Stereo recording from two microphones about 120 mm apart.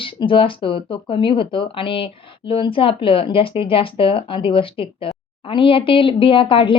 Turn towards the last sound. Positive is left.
turn(degrees=45)  # may be behind; listen again after turning